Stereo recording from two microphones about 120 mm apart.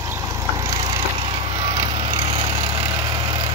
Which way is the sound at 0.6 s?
25° right (ahead or behind).